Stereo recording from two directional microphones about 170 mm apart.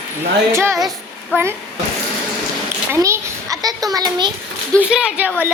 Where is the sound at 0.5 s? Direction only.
15° right (ahead or behind).